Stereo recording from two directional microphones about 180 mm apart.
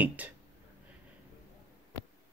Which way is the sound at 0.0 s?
10° right (ahead or behind).